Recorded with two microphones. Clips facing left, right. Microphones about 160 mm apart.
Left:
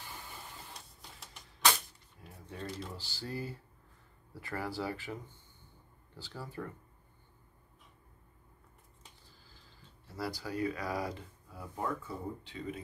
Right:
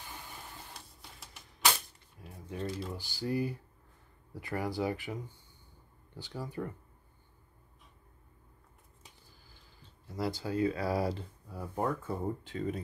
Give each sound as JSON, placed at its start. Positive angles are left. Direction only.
{"t": 0.7, "sound": "printer", "side_deg": 0}
{"t": 2.6, "sound": "speech", "side_deg": 0}
{"t": 2.9, "sound": "speech", "side_deg": -15}
{"t": 10.0, "sound": "speech", "side_deg": -20}